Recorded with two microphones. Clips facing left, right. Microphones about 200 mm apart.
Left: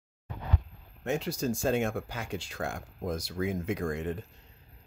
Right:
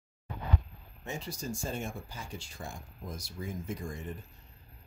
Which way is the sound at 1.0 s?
75° left (ahead or behind).